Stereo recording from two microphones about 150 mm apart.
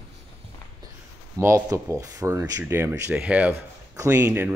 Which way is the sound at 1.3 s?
20° right (ahead or behind).